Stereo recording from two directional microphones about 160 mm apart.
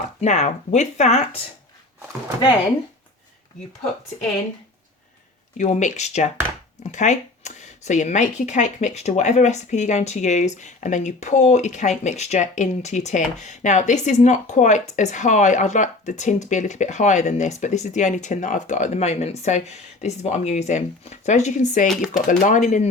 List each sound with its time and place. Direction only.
0.2 s speech: 45° left (ahead or behind)
5.5 s speech: 50° left (ahead or behind)
21.8 s speech: 5° right (ahead or behind)
22.3 s speech: 50° left (ahead or behind)